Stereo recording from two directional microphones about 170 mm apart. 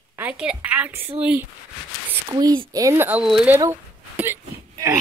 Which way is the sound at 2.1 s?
20° right (ahead or behind).